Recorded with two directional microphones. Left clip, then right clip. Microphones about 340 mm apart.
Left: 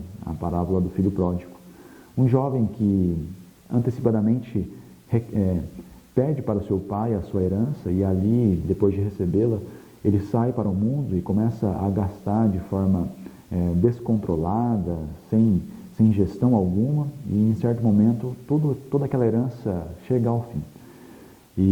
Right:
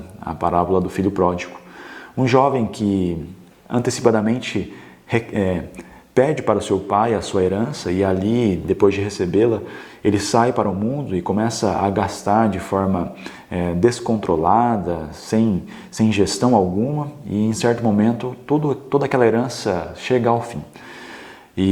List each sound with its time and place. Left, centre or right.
0.3 s speech: centre
3.7 s speech: centre
16.5 s speech: centre